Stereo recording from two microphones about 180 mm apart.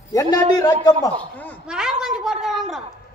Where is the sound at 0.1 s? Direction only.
20° left (ahead or behind).